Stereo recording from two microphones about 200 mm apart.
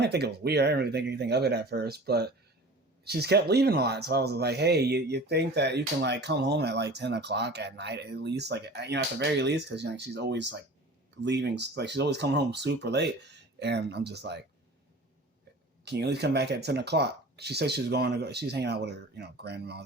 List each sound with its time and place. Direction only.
0.0 s speech: 55° right (ahead or behind)
15.8 s speech: 55° right (ahead or behind)